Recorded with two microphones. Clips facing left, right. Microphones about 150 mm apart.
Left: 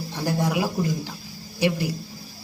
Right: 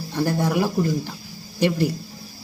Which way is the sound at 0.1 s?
10° left (ahead or behind).